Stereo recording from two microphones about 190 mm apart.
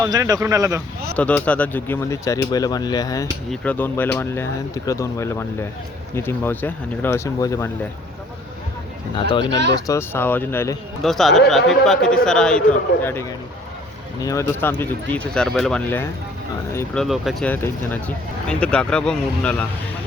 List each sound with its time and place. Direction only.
0.0 s speech: 20° right (ahead or behind)
1.1 s speech: 5° left (ahead or behind)
3.5 s speech: 5° left (ahead or behind)
9.3 s speech: 25° left (ahead or behind)
11.0 s speech: centre (ahead or behind)